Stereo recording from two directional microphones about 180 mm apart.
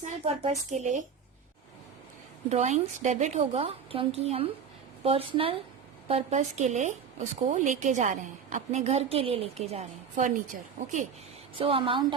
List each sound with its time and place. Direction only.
0.0 s a woman's voice: 35° right (ahead or behind)
2.5 s a woman's voice: 40° right (ahead or behind)
11.5 s a woman's voice: 30° right (ahead or behind)